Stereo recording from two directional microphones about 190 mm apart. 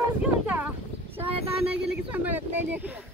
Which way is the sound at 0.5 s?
10° right (ahead or behind).